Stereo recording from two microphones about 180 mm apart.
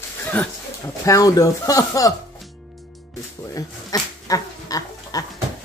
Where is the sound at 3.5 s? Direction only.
20° left (ahead or behind).